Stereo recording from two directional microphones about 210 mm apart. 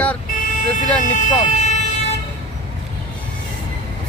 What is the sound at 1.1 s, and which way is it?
Speech, 35° left (ahead or behind).